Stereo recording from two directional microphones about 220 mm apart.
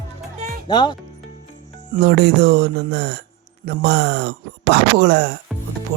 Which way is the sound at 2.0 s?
50° right (ahead or behind).